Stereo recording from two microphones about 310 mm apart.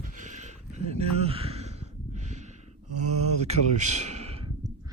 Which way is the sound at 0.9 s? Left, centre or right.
Centre.